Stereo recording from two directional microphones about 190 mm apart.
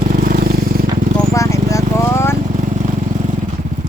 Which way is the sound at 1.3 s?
15° left (ahead or behind).